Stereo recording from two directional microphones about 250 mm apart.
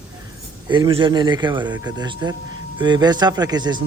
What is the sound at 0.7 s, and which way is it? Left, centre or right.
Speech, centre.